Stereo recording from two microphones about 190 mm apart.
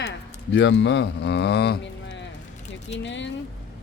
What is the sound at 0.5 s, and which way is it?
Speech, 70° left (ahead or behind).